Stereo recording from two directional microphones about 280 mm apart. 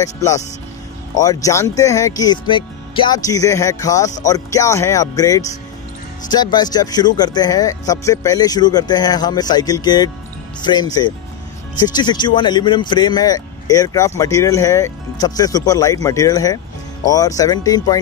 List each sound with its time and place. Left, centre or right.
0.0 s speech: centre